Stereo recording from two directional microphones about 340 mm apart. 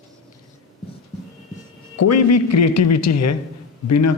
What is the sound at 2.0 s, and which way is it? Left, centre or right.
A man's voice, left.